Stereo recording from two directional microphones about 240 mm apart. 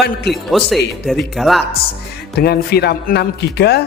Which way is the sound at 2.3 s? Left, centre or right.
Left.